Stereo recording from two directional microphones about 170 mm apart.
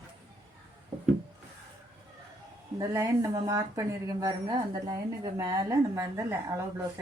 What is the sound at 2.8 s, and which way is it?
A woman's voice, 20° right (ahead or behind).